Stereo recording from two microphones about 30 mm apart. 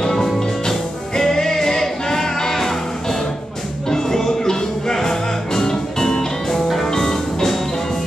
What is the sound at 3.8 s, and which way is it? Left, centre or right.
Music, centre.